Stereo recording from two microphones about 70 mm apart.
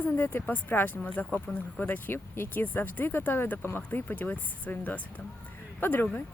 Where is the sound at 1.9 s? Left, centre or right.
Left.